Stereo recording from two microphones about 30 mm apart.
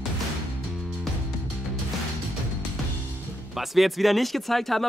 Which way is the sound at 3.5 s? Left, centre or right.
Centre.